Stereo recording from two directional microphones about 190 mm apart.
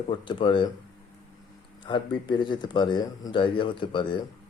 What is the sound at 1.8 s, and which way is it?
Speech, 25° left (ahead or behind).